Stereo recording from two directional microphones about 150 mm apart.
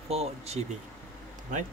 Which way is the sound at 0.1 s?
45° right (ahead or behind).